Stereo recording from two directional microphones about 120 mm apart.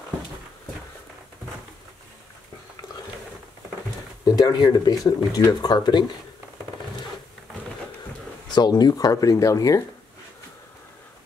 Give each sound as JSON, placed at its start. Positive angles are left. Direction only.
{"t": 4.2, "sound": "speech", "side_deg": 35}
{"t": 8.5, "sound": "speech", "side_deg": 35}